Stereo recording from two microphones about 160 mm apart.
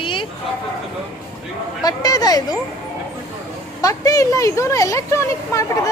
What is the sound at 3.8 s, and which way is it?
Speech, 20° left (ahead or behind).